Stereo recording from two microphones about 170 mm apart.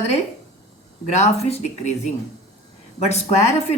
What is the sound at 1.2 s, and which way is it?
Speech, 40° left (ahead or behind).